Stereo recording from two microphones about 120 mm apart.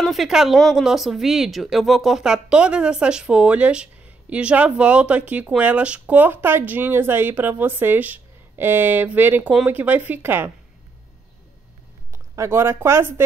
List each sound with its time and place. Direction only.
0.0 s speech: centre (ahead or behind); by 10.5 s 20° right (ahead or behind)
12.1 s speech: 20° right (ahead or behind)